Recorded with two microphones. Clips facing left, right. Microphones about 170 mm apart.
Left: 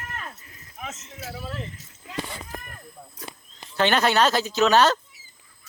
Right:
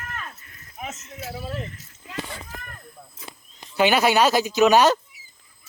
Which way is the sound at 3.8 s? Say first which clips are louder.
Right 2 dB; 10° right (ahead or behind).